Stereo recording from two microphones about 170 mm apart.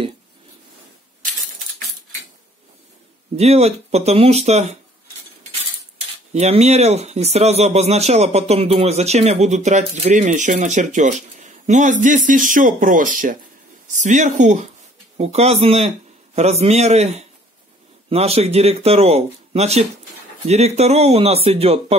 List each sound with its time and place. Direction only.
3.3 s speech: 40° right (ahead or behind)
5.9 s speech: 35° right (ahead or behind)